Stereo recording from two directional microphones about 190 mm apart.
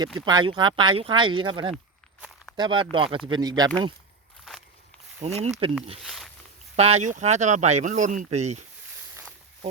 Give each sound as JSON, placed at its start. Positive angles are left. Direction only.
{"t": 0.0, "sound": "speech", "side_deg": -20}
{"t": 5.2, "sound": "speech", "side_deg": -35}
{"t": 6.0, "sound": "a sound", "side_deg": 0}
{"t": 6.7, "sound": "speech", "side_deg": -35}